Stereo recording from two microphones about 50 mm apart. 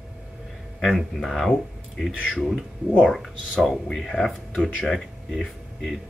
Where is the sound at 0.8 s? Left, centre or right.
Centre.